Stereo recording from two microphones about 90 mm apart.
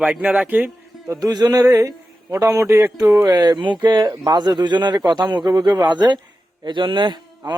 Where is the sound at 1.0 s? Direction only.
45° right (ahead or behind).